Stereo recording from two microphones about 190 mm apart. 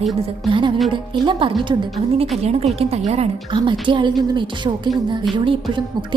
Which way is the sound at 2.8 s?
35° right (ahead or behind).